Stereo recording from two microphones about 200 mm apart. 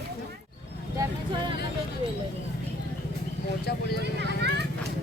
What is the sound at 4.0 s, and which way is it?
Vehicle, 60° right (ahead or behind).